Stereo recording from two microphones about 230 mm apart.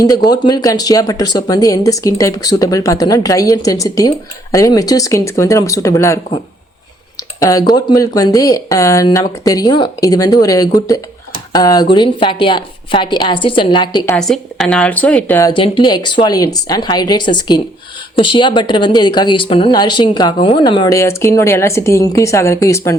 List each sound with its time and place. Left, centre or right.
0.0 s speech: centre
7.3 s a woman's voice: centre
14.2 s speech: centre